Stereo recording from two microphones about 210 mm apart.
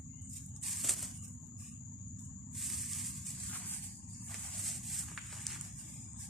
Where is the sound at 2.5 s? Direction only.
Centre (ahead or behind).